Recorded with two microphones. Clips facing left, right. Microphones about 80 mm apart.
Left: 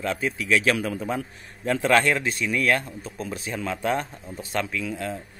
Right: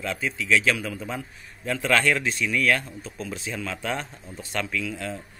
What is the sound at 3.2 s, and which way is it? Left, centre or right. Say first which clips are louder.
Speech: left 2 dB; left.